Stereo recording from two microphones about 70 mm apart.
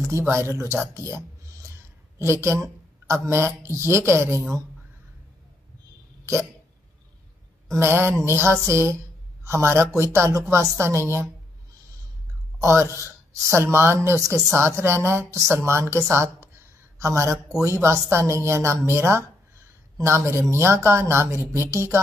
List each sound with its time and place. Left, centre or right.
0.3 s speech: right
1.0 s a sound: right
2.1 s speech: right
7.7 s a woman's voice: right
12.5 s speech: right
16.1 s a sound: right
17.8 s speech: right